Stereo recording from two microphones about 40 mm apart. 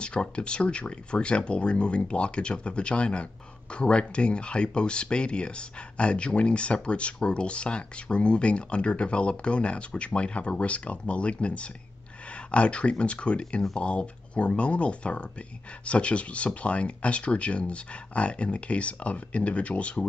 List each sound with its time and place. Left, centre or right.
0.0 s speech: left